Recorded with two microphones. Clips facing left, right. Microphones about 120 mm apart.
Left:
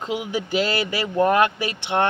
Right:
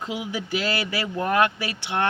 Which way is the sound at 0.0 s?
25° left (ahead or behind).